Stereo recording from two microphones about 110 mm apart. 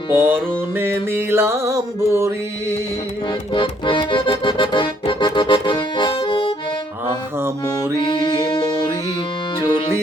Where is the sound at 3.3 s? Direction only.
50° left (ahead or behind).